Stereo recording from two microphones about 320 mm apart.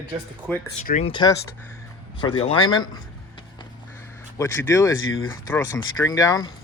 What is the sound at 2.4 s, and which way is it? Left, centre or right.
Speech, centre.